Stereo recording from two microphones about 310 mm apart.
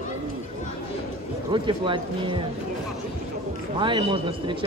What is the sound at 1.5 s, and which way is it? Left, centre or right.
Speech, centre.